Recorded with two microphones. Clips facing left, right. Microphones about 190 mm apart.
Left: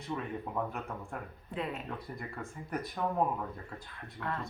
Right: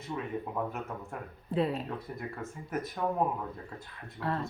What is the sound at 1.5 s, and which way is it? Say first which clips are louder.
Speech: right 8 dB; 35° right (ahead or behind).